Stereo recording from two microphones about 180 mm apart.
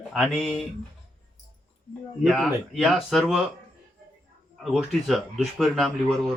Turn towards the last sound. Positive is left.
turn(degrees=0)  # may be behind; listen again after turning